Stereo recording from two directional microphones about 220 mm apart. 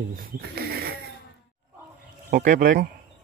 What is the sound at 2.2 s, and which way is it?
Speech, 35° right (ahead or behind).